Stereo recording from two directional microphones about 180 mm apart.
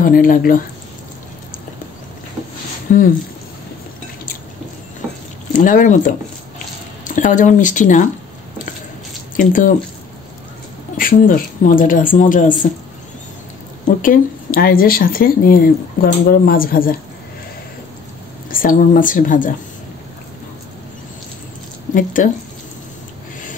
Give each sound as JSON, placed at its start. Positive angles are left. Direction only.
{"t": 0.0, "sound": "speech", "side_deg": 50}
{"t": 5.6, "sound": "speech", "side_deg": 45}
{"t": 9.4, "sound": "speech", "side_deg": 50}
{"t": 11.0, "sound": "speech", "side_deg": 50}
{"t": 14.0, "sound": "speech", "side_deg": 50}
{"t": 18.5, "sound": "speech", "side_deg": 50}
{"t": 21.9, "sound": "speech", "side_deg": 45}